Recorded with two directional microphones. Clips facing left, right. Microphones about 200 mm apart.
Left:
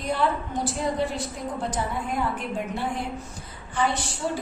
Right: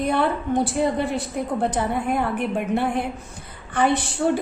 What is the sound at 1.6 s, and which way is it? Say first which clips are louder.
A woman's voice: right 5 dB; 60° right (ahead or behind).